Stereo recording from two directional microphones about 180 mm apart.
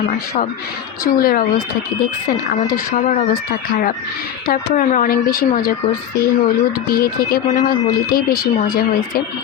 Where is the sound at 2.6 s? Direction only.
50° left (ahead or behind).